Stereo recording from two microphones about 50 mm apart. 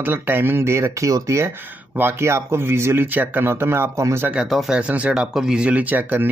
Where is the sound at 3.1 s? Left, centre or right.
Right.